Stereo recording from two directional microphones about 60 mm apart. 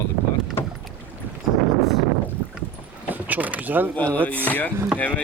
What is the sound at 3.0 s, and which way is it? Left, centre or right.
Vehicle, right.